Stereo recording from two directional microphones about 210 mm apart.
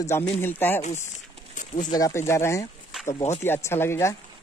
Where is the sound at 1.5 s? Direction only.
35° left (ahead or behind).